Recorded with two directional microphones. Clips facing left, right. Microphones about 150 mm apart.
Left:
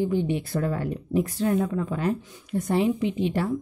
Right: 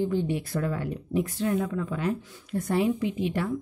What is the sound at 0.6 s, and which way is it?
Speech, 40° left (ahead or behind).